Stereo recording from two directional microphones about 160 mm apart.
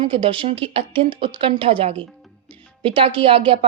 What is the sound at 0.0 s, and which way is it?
A woman's voice, 35° right (ahead or behind).